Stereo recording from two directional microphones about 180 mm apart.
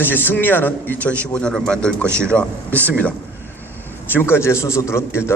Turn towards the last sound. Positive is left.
turn(degrees=15)  # may be behind; listen again after turning